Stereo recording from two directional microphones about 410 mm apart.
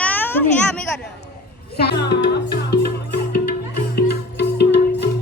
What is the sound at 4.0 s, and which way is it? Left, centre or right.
Music, left.